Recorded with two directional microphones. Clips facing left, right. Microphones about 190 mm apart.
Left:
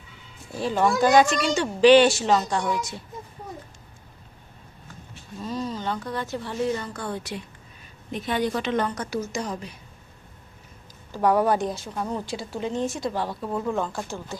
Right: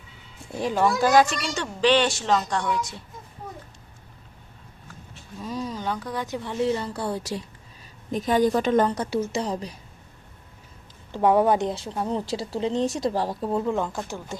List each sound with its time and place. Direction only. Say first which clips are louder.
0.5 s speech: even; 10° right (ahead or behind); by 2.7 s 10° left (ahead or behind)
5.4 s speech: left 1 dB; 10° right (ahead or behind)
6.7 s a woman's voice: right 2 dB; 30° right (ahead or behind)
11.1 s speech: right 2 dB; 25° right (ahead or behind)
12.3 s a woman's voice: right 3 dB; 35° right (ahead or behind)
13.5 s speech: right 1 dB; 20° right (ahead or behind)